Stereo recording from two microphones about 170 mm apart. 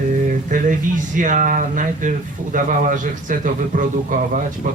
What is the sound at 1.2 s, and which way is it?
Speech, 50° right (ahead or behind).